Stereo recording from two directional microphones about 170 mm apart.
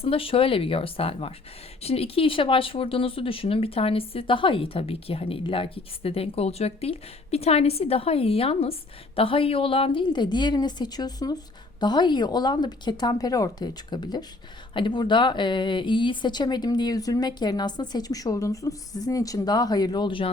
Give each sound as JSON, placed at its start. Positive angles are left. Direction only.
{"t": 0.0, "sound": "speech", "side_deg": 35}